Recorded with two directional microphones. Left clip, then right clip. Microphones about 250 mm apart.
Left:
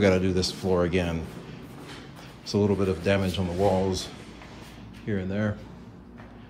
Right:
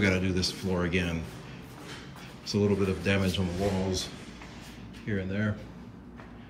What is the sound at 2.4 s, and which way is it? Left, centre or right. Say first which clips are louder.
Speech: left 3 dB; centre.